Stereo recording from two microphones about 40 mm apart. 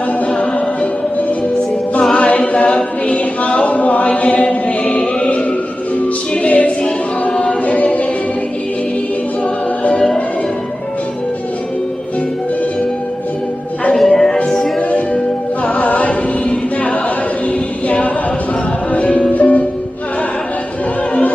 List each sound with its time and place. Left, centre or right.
0.3 s music: left
2.1 s chant: left
6.3 s a capella: left
6.8 s choir: left
13.9 s music: centre
14.8 s music: left
15.6 s a capella: left
17.5 s choir: left
18.9 s music: left